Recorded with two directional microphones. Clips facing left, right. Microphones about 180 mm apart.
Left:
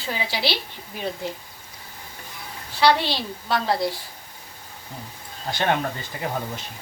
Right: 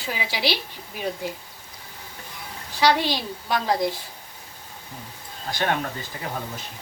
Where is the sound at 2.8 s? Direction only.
15° right (ahead or behind).